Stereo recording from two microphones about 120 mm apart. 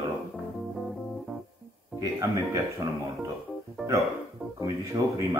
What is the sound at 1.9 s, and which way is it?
Speech, 30° right (ahead or behind).